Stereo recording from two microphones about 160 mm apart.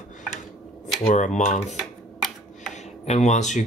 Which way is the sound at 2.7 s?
45° left (ahead or behind).